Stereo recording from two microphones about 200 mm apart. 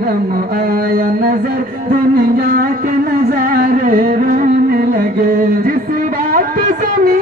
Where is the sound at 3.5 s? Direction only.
45° right (ahead or behind).